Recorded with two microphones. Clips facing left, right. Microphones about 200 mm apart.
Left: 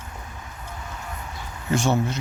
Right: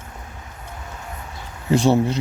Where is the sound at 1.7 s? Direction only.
35° right (ahead or behind).